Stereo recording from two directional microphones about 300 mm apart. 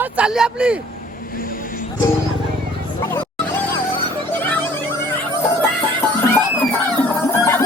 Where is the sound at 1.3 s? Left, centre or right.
Left.